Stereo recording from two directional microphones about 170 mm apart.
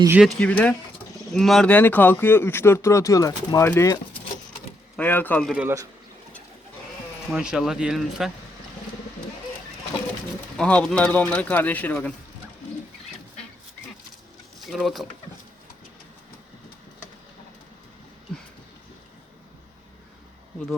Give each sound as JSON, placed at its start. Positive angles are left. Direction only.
{"t": 0.2, "sound": "speech", "side_deg": 5}
{"t": 5.5, "sound": "a man's voice", "side_deg": -15}
{"t": 7.3, "sound": "speech", "side_deg": -5}
{"t": 10.6, "sound": "speech", "side_deg": 5}
{"t": 14.6, "sound": "speech", "side_deg": 0}